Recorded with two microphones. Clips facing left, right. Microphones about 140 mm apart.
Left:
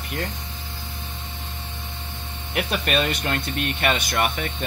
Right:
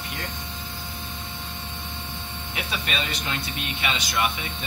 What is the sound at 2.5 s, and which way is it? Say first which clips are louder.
Speech: left 7 dB; 55° left (ahead or behind).